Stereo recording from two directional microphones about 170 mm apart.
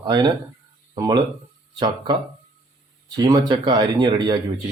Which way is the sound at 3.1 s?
25° right (ahead or behind).